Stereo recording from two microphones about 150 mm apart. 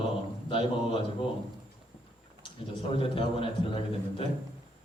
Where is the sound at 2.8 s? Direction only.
35° left (ahead or behind).